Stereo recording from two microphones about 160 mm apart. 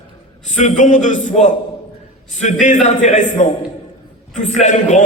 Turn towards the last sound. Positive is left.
turn(degrees=50)  # may be behind; listen again after turning